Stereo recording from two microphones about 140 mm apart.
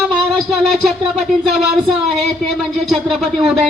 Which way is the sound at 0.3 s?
Centre (ahead or behind).